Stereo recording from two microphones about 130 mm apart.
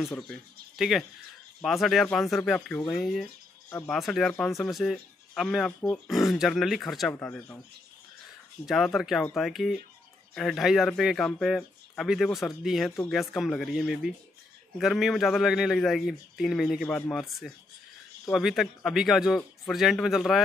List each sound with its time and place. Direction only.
0.2 s a man's voice: centre (ahead or behind)
7.2 s speech: 15° left (ahead or behind)
8.6 s a man's voice: centre (ahead or behind)